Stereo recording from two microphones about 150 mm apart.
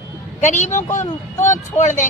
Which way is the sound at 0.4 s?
50° left (ahead or behind).